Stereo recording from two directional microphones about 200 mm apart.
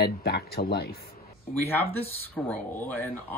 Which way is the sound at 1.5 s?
10° left (ahead or behind).